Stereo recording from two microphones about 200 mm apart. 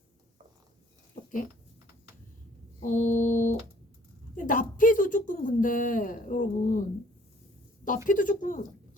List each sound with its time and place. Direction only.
2.8 s a woman's voice: 40° left (ahead or behind)
7.9 s a woman's voice: 40° left (ahead or behind)